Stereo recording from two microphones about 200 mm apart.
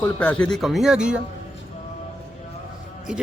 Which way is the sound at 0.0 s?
5° left (ahead or behind).